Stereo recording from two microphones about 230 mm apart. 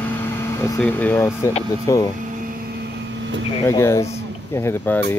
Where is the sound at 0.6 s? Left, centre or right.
Centre.